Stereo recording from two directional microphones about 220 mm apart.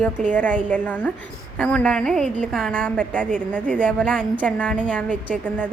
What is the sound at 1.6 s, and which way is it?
A woman's voice, 5° left (ahead or behind).